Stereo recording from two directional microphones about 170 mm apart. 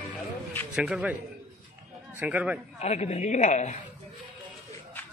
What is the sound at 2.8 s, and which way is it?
Speech, 40° left (ahead or behind).